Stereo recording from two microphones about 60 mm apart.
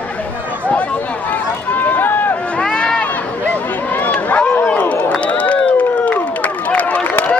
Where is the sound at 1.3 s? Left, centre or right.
Left.